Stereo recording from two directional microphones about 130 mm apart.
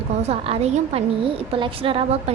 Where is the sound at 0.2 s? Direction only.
50° right (ahead or behind).